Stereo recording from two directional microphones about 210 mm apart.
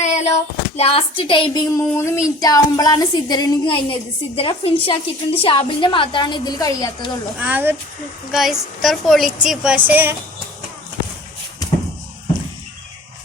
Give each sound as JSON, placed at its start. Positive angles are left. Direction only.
{"t": 0.0, "sound": "a sound", "side_deg": 35}
{"t": 0.8, "sound": "a woman's voice", "side_deg": 25}
{"t": 7.3, "sound": "a child's voice", "side_deg": -10}